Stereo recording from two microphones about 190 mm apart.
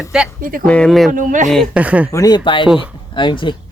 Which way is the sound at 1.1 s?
45° right (ahead or behind).